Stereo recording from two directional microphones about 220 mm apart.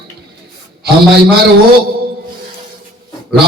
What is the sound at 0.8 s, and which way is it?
Speech, 45° right (ahead or behind).